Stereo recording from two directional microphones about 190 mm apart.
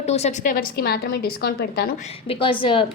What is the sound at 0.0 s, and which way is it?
A woman's voice, 35° left (ahead or behind).